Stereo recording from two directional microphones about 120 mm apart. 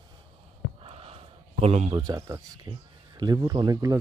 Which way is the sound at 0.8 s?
55° right (ahead or behind).